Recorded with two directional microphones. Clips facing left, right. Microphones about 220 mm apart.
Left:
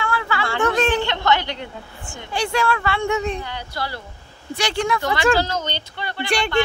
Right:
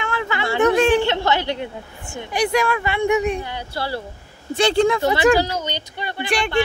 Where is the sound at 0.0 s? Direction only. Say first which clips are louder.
Even; 20° right (ahead or behind).